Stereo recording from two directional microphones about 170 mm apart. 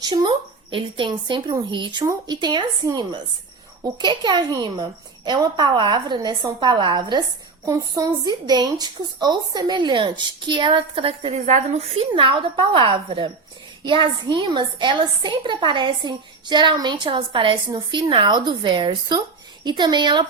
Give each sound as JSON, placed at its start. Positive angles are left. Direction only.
{"t": 0.0, "sound": "a woman's voice", "side_deg": -25}